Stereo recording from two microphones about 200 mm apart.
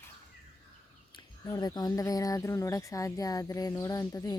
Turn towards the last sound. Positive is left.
turn(degrees=15)  # may be behind; listen again after turning